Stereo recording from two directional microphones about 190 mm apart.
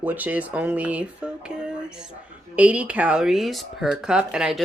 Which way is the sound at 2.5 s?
5° right (ahead or behind).